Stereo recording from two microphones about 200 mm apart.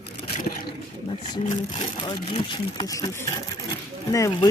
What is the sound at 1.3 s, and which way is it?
Speech, 20° left (ahead or behind).